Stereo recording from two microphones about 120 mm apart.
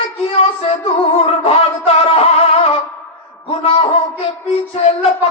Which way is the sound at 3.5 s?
55° left (ahead or behind).